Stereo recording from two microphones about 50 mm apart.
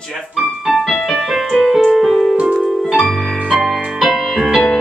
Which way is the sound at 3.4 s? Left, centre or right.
Centre.